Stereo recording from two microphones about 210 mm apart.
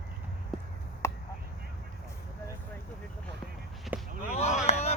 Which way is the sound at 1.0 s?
10° left (ahead or behind).